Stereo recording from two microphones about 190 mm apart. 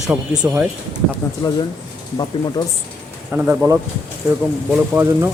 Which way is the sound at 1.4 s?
25° left (ahead or behind).